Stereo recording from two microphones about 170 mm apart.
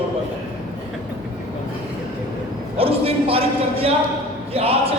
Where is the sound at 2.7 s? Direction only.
35° right (ahead or behind).